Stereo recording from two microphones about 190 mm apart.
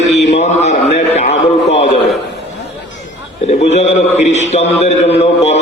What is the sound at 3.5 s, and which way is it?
A man's voice, 35° left (ahead or behind).